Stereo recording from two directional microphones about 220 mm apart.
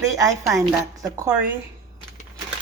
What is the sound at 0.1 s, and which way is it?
Speech, 15° right (ahead or behind).